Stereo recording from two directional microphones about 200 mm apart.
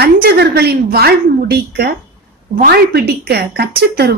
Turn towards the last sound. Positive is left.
turn(degrees=-50)  # may be behind; listen again after turning